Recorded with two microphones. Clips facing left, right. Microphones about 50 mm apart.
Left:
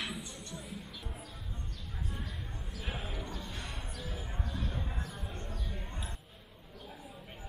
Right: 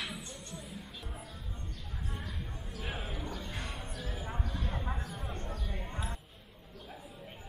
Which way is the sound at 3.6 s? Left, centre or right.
Centre.